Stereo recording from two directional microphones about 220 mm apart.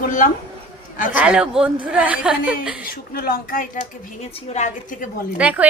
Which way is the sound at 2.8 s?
45° left (ahead or behind).